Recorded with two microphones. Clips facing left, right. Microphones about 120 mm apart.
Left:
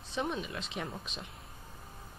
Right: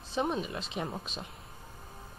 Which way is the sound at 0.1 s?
35° right (ahead or behind).